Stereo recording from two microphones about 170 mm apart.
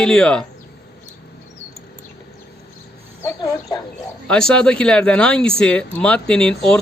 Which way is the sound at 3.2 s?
20° left (ahead or behind).